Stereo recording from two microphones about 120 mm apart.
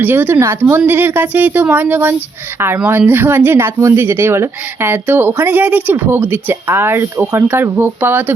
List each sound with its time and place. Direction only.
0.0 s speech: 15° right (ahead or behind)